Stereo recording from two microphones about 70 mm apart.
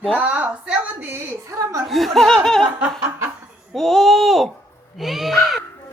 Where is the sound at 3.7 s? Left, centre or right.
Centre.